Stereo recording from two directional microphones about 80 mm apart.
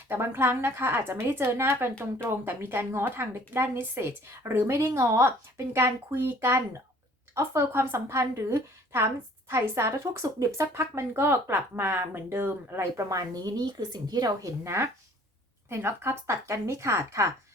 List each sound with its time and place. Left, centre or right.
0.1 s a woman's voice: right
14.6 s speech: right